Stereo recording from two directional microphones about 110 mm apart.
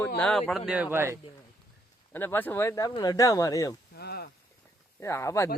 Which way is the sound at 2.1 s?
20° left (ahead or behind).